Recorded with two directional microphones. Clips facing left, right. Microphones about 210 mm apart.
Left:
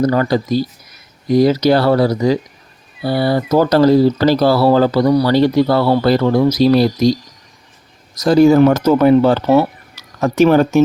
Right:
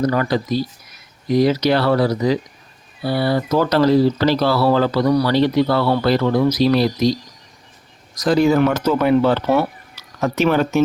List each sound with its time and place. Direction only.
0.0 s speech: 35° left (ahead or behind)
8.4 s speech: 40° left (ahead or behind)